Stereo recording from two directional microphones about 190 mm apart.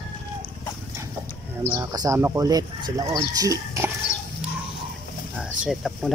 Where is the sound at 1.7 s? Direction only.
20° right (ahead or behind).